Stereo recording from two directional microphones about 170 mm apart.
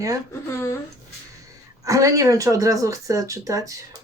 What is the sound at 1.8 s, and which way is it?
Speech, 20° right (ahead or behind).